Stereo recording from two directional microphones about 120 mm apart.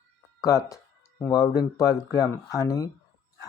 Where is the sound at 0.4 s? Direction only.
30° left (ahead or behind).